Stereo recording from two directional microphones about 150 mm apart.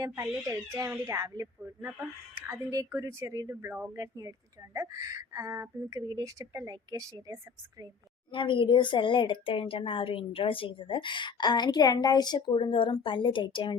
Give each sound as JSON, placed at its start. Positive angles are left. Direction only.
{"t": 0.0, "sound": "speech", "side_deg": -20}
{"t": 8.3, "sound": "a woman's voice", "side_deg": 35}